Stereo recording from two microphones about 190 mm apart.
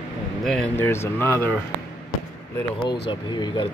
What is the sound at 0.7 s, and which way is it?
Speech, 15° left (ahead or behind).